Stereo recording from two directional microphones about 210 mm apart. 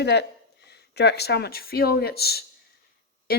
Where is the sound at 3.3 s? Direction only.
50° left (ahead or behind).